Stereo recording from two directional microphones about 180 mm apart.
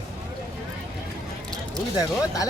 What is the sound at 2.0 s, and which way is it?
Speech, 20° left (ahead or behind).